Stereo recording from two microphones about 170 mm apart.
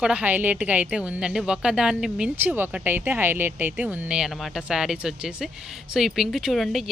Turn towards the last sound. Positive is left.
turn(degrees=0)  # may be behind; listen again after turning